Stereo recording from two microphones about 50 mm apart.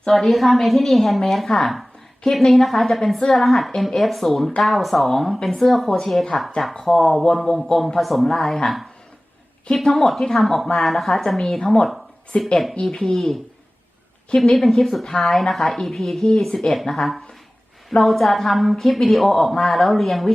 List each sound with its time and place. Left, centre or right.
0.1 s a woman's voice: centre
12.3 s speech: left
12.7 s a woman's voice: centre